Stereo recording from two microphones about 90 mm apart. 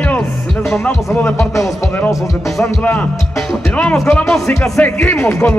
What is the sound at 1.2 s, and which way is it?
Speech, 30° left (ahead or behind).